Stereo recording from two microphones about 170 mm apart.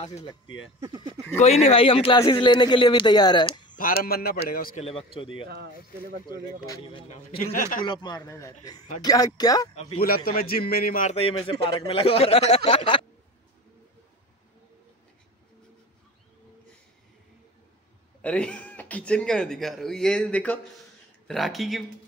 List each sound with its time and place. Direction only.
0.2 s speech: 25° left (ahead or behind)
0.7 s speech: 20° right (ahead or behind)
1.4 s speech: 40° left (ahead or behind)
3.7 s a man's voice: 60° left (ahead or behind)
4.7 s speech: 35° left (ahead or behind)
6.7 s speech: 30° left (ahead or behind)
7.1 s a man's voice: 50° left (ahead or behind)
7.8 s speech: 25° left (ahead or behind)
9.9 s a man's voice: 60° left (ahead or behind)
11.1 s speech: 35° left (ahead or behind)
18.2 s speech: 5° left (ahead or behind)